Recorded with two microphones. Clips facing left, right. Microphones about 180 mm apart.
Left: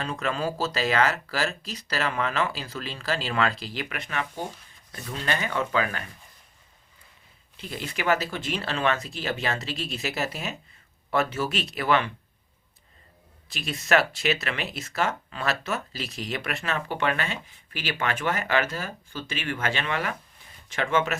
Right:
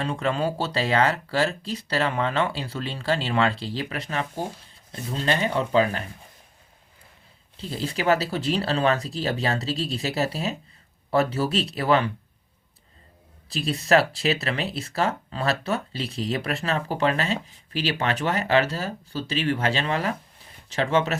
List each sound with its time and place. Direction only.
0.0 s speech: 30° right (ahead or behind)
7.5 s speech: 30° right (ahead or behind)
13.5 s speech: 35° right (ahead or behind)